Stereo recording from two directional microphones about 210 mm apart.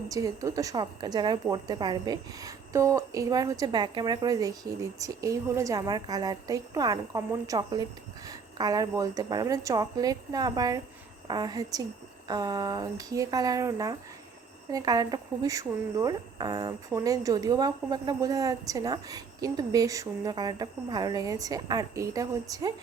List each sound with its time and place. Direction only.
0.1 s a woman's voice: 15° right (ahead or behind)